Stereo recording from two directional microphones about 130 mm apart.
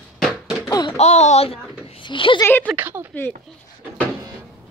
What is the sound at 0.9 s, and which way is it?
Speech, 60° left (ahead or behind).